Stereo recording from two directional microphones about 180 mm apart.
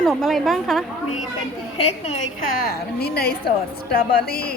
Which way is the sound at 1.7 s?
35° left (ahead or behind).